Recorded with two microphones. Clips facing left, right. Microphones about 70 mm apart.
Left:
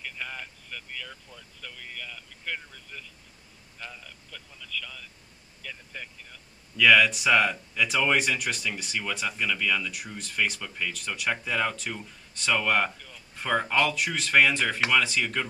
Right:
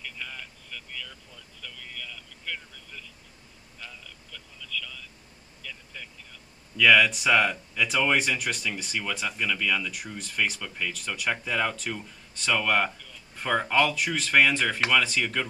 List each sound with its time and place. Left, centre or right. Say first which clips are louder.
0.0 s vehicle: left 2 dB; left
3.8 s a sound: left 2 dB; left
5.6 s vehicle: left 2 dB; left
6.8 s speech: even; centre